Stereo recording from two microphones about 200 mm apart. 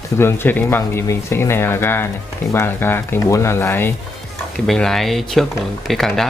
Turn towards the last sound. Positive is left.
turn(degrees=0)  # may be behind; listen again after turning